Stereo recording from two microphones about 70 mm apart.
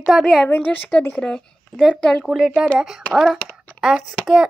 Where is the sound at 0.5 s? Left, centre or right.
Left.